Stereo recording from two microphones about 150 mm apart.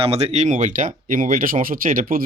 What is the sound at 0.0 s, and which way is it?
Speech, 45° right (ahead or behind).